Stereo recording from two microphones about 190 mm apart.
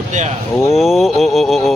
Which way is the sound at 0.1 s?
40° right (ahead or behind).